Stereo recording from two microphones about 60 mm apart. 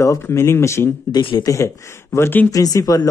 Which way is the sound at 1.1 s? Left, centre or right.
Left.